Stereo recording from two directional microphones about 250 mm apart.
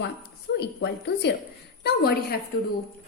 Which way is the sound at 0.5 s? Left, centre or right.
Left.